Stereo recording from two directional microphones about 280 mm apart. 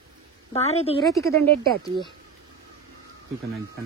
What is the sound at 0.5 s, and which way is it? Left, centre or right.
Speech, left.